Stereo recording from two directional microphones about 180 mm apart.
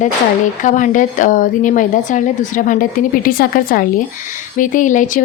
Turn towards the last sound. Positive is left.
turn(degrees=45)  # may be behind; listen again after turning